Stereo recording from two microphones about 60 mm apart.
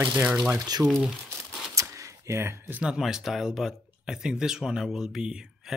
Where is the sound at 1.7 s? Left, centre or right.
Right.